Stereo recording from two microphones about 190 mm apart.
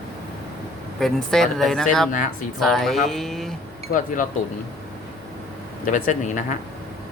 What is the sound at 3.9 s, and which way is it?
Speech, 45° left (ahead or behind).